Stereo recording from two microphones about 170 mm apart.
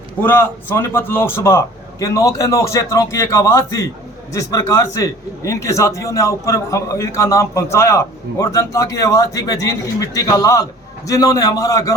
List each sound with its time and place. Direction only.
0.2 s a man's voice: 10° left (ahead or behind)